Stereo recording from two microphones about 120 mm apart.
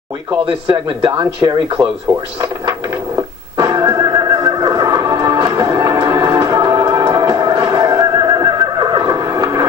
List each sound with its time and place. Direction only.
0.7 s speech: 40° right (ahead or behind)
3.5 s music: 35° right (ahead or behind)